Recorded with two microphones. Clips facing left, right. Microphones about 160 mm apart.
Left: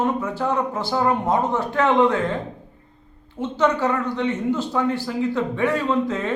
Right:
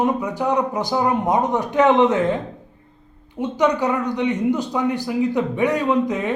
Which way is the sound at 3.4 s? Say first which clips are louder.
Right 1 dB; 15° right (ahead or behind).